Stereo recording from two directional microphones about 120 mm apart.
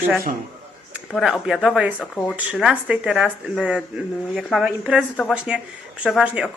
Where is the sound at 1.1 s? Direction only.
Centre (ahead or behind).